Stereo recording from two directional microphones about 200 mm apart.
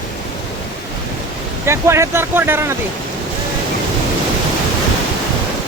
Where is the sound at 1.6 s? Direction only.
15° right (ahead or behind).